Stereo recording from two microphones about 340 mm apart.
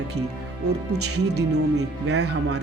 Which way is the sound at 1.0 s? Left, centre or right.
Right.